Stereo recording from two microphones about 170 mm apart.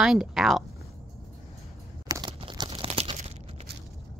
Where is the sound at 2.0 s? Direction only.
20° right (ahead or behind); by 3.2 s 35° right (ahead or behind).